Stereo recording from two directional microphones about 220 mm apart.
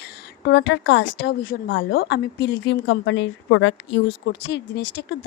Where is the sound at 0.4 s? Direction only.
55° left (ahead or behind).